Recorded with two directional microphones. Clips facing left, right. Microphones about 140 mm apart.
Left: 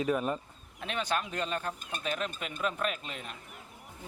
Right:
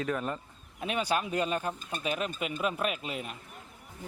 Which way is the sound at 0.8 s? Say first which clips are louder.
Right 3 dB; 10° right (ahead or behind).